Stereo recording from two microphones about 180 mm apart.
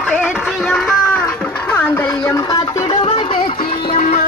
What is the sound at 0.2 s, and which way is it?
Music, 5° right (ahead or behind).